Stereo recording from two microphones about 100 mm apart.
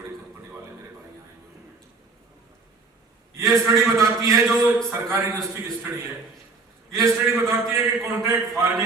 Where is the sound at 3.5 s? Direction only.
30° right (ahead or behind).